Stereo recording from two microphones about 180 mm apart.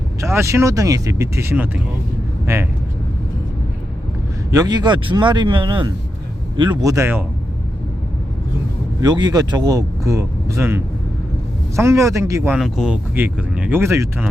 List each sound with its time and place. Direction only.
0.2 s speech: 15° right (ahead or behind)
4.5 s speech: 20° right (ahead or behind)
9.0 s speech: 20° right (ahead or behind)
12.5 s speech: centre (ahead or behind)